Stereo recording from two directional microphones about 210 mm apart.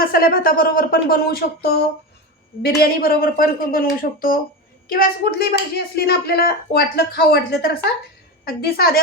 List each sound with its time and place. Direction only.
0.0 s speech: 45° left (ahead or behind)
2.6 s speech: 45° left (ahead or behind)